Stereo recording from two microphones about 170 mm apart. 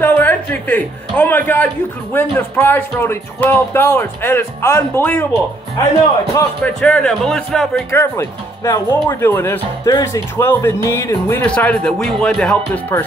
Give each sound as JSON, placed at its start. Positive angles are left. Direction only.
{"t": 0.0, "sound": "a man's voice", "side_deg": 10}
{"t": 7.9, "sound": "speech", "side_deg": 15}